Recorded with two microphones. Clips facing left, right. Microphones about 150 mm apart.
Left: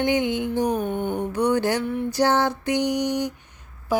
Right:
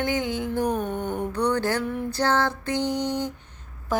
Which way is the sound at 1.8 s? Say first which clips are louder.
Left 3 dB; centre (ahead or behind).